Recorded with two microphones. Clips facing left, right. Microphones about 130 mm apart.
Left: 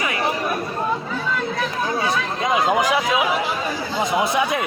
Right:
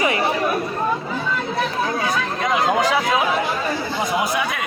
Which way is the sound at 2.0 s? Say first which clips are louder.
Even; 20° left (ahead or behind).